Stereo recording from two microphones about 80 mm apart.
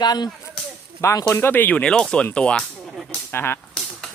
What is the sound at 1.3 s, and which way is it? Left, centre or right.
Speech, left.